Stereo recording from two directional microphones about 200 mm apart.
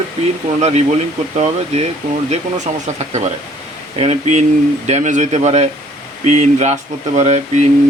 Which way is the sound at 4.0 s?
30° right (ahead or behind).